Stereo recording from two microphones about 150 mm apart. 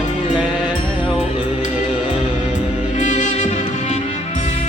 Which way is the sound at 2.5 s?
55° left (ahead or behind).